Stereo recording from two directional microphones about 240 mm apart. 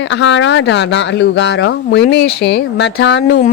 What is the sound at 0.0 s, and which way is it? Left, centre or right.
Speech, left.